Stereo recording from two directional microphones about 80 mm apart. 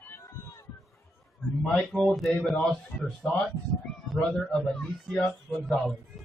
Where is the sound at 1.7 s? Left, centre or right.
Centre.